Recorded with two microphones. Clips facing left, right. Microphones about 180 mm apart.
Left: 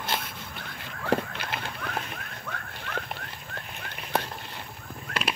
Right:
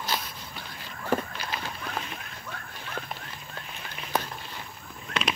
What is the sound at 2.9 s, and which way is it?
Livestock, 70° left (ahead or behind).